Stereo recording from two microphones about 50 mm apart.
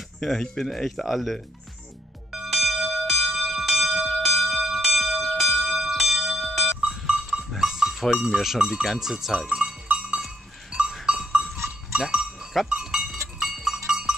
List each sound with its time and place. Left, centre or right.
0.2 s speech: centre
2.3 s bell: centre
6.4 s a sound: centre
6.9 s goat: centre
8.8 s speech: centre
9.9 s sheep: centre
10.7 s goat: centre
13.4 s cowbell: centre